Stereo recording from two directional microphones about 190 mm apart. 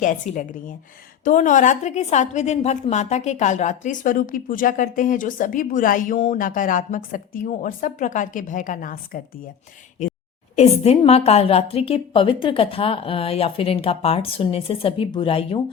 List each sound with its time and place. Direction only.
0.0 s a woman's voice: 45° left (ahead or behind)
10.5 s a woman's voice: 35° left (ahead or behind)